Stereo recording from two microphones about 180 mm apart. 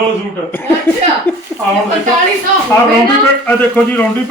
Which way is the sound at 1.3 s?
10° left (ahead or behind).